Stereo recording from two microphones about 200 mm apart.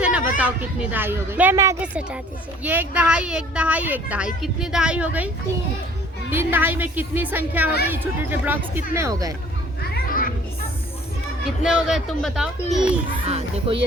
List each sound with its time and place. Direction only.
0.0 s a woman's voice: 5° right (ahead or behind)
6.3 s a woman's voice: 10° right (ahead or behind)
10.1 s music: 45° left (ahead or behind)
11.6 s speech: centre (ahead or behind)
13.2 s speech: 30° right (ahead or behind)